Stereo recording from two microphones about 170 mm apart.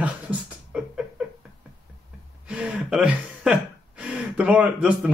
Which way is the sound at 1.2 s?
5° right (ahead or behind).